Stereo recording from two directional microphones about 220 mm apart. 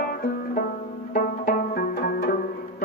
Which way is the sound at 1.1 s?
40° left (ahead or behind).